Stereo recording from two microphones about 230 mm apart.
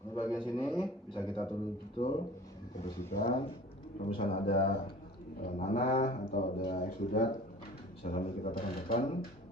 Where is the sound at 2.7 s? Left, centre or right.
Left.